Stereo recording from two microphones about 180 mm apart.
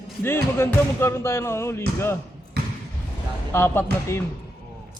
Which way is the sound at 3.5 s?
15° left (ahead or behind).